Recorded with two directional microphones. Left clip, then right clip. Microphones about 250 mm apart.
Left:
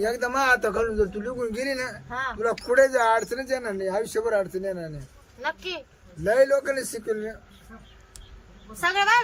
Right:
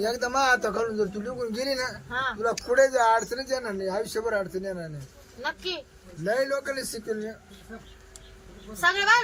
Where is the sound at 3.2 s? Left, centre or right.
Left.